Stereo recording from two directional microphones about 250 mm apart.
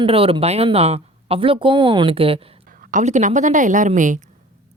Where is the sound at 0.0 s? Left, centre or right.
Right.